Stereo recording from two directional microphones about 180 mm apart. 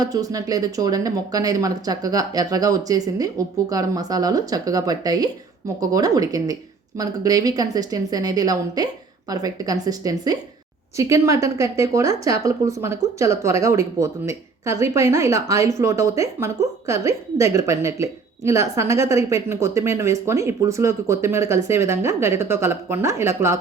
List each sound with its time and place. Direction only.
0.0 s a woman's voice: 20° right (ahead or behind)